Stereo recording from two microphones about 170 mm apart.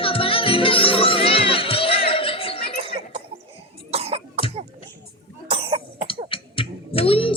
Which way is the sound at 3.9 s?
35° right (ahead or behind).